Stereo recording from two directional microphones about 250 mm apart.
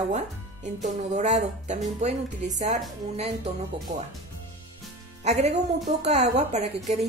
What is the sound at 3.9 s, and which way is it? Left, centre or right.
Speech, right.